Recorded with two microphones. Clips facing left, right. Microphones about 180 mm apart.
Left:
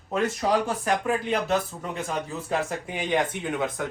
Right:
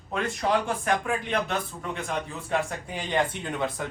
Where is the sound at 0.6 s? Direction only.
35° left (ahead or behind).